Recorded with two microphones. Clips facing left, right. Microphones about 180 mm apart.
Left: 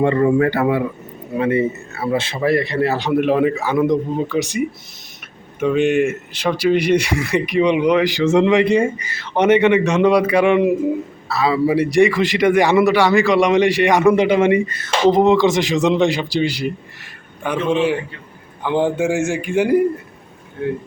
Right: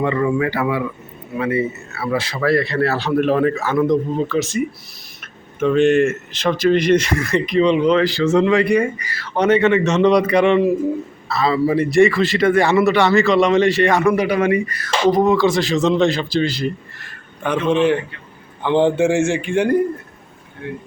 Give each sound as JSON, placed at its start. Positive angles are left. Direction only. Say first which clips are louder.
{"t": 0.0, "sound": "speech", "louder": "left 4 dB", "side_deg": 35}
{"t": 2.0, "sound": "a man's voice", "louder": "left 1 dB", "side_deg": 25}